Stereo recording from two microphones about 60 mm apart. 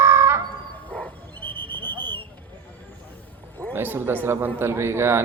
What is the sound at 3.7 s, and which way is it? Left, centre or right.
Speech, right.